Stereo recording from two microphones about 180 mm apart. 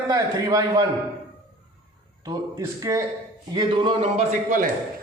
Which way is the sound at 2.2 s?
20° right (ahead or behind).